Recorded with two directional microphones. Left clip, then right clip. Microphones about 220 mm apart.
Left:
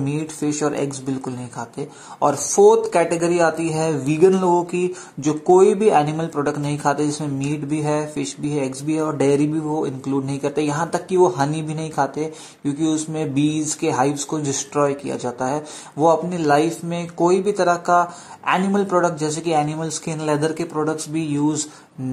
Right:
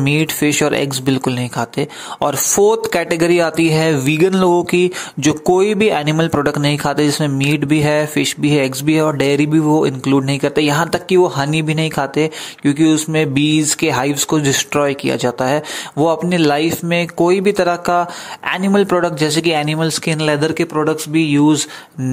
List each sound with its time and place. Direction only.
0.0 s speech: 30° right (ahead or behind)
2.2 s speech: 55° right (ahead or behind)
2.9 s speech: 35° right (ahead or behind)
4.4 s speech: 55° right (ahead or behind)
4.6 s speech: 35° right (ahead or behind)